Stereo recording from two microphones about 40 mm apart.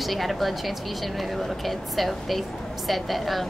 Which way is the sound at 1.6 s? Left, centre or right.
Centre.